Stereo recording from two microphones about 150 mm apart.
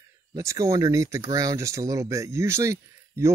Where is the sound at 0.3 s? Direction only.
20° right (ahead or behind).